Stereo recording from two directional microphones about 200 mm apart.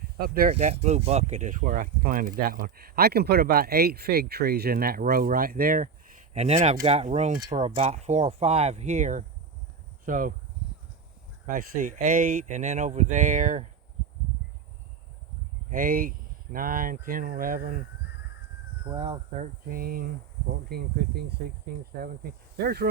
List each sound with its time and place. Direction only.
0.2 s speech: 50° right (ahead or behind)
0.5 s speech: 30° right (ahead or behind)
6.3 s speech: 35° right (ahead or behind)
11.4 s speech: 40° right (ahead or behind)
15.7 s speech: 45° right (ahead or behind)
18.9 s speech: 20° right (ahead or behind)
19.4 s speech: 45° right (ahead or behind)